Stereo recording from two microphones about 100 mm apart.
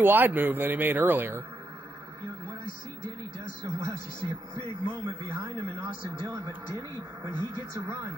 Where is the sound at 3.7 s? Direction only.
30° right (ahead or behind).